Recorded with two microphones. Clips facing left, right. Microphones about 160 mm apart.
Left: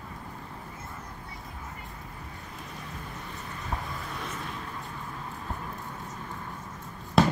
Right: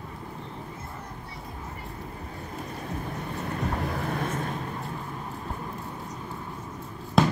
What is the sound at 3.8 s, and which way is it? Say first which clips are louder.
Vehicle: right 8 dB; 65° right (ahead or behind).